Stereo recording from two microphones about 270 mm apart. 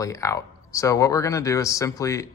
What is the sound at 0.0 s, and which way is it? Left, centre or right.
Speech, centre.